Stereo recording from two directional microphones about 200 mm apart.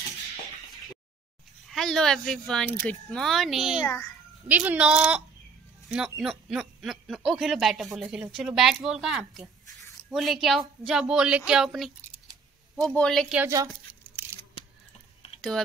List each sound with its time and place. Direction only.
1.7 s speech: centre (ahead or behind)
3.8 s a child's voice: 15° left (ahead or behind)
4.5 s speech: 10° right (ahead or behind)
12.0 s scissors: 15° right (ahead or behind)
12.8 s speech: 5° left (ahead or behind)
13.4 s speech: 15° right (ahead or behind)